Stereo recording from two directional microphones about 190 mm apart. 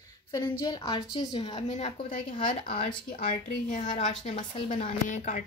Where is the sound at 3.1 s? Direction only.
45° left (ahead or behind).